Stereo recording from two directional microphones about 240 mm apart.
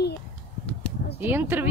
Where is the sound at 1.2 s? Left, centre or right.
Centre.